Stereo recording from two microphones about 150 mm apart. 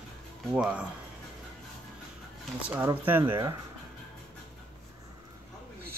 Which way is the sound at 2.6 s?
15° right (ahead or behind).